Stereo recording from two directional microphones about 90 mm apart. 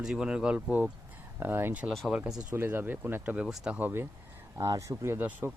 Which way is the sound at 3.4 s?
5° right (ahead or behind).